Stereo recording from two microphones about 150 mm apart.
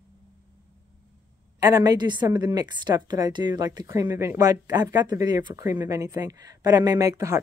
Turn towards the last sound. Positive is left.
turn(degrees=-20)  # may be behind; listen again after turning